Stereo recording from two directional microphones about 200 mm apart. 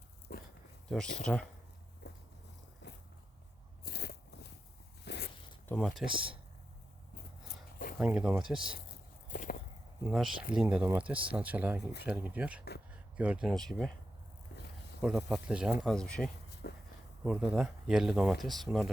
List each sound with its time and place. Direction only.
0.3 s a sound: 45° left (ahead or behind)
0.9 s speech: 5° left (ahead or behind)
2.0 s a sound: 55° left (ahead or behind)
2.8 s biting: 60° left (ahead or behind)
5.0 s zipper: 55° left (ahead or behind)
5.6 s speech: 5° left (ahead or behind)
7.4 s a sound: 45° left (ahead or behind)
7.9 s speech: 5° right (ahead or behind)
9.3 s a sound: 40° left (ahead or behind)
10.1 s speech: centre (ahead or behind)
15.0 s speech: 5° right (ahead or behind)
16.6 s speech: 55° left (ahead or behind)
17.2 s speech: 5° right (ahead or behind)